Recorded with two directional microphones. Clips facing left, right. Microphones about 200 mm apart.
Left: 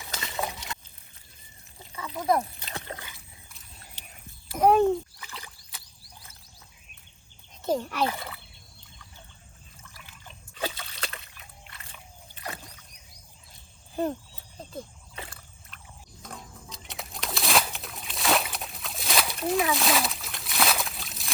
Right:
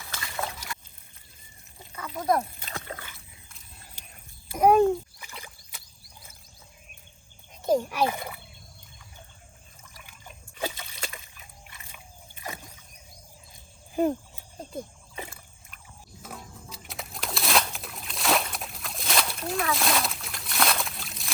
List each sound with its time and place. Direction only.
0.0 s a sound: 20° left (ahead or behind)
2.1 s speech: centre (ahead or behind)
2.4 s splash: 25° left (ahead or behind)
7.6 s fowl: 10° right (ahead or behind)
9.8 s trickle: 15° right (ahead or behind)
12.5 s rowboat: 15° right (ahead or behind)
13.9 s a sound: 10° right (ahead or behind)